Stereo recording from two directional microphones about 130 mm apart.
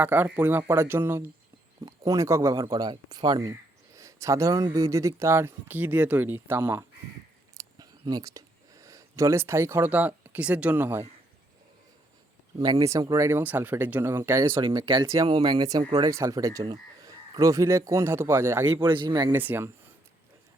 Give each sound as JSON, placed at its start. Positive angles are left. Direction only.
{"t": 0.0, "sound": "speech", "side_deg": -15}
{"t": 7.5, "sound": "a sound", "side_deg": -30}
{"t": 12.9, "sound": "speech", "side_deg": -25}
{"t": 14.4, "sound": "speech", "side_deg": -40}
{"t": 18.8, "sound": "speech", "side_deg": -35}
{"t": 19.3, "sound": "speech", "side_deg": -15}